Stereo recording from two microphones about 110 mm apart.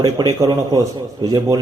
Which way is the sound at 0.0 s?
35° right (ahead or behind).